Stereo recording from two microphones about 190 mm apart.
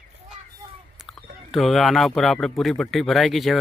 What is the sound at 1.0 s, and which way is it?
Speech, centre (ahead or behind).